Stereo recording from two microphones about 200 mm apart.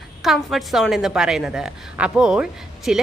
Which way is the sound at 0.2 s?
Centre (ahead or behind).